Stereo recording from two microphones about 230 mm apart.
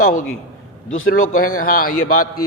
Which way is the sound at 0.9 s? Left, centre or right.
Left.